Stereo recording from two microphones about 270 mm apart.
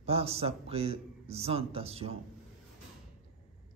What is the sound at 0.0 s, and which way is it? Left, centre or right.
A man's voice, right.